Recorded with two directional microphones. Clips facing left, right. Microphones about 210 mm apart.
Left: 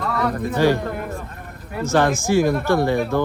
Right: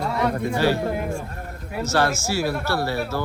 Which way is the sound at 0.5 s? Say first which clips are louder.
Left 3 dB; 10° right (ahead or behind).